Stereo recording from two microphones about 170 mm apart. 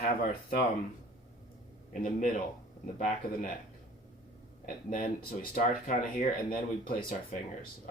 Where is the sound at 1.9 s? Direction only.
50° left (ahead or behind).